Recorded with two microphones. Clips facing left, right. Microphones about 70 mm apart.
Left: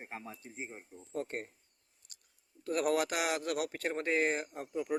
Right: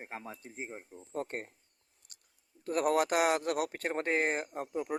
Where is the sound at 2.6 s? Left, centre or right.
Right.